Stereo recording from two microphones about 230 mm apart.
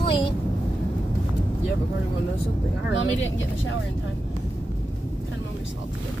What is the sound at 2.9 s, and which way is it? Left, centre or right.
Speech, left.